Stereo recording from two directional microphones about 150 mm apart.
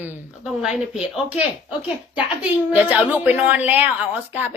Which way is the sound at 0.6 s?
5° right (ahead or behind).